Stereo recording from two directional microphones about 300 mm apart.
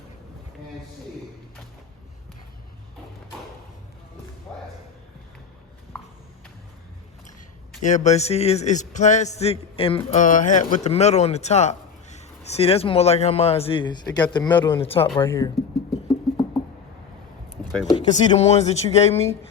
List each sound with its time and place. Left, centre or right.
7.8 s a man's voice: left
17.8 s a man's voice: centre